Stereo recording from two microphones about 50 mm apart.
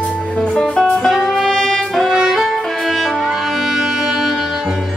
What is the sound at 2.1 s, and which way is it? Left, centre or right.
Music, centre.